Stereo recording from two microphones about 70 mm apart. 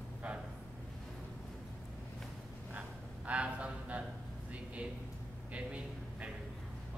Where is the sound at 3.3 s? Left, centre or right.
Centre.